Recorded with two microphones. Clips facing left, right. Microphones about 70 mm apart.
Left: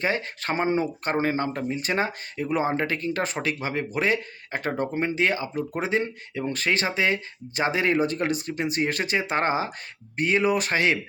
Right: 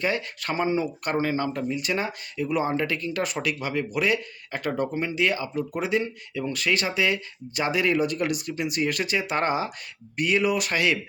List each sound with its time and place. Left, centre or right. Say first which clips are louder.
0.0 s speech: left 1 dB; left